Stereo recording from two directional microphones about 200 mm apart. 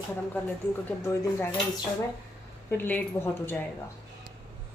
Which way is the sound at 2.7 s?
10° left (ahead or behind).